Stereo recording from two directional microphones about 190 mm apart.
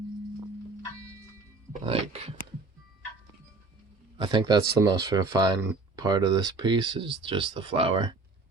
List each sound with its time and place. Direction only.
1.7 s speech: 30° right (ahead or behind)
4.2 s speech: 25° right (ahead or behind)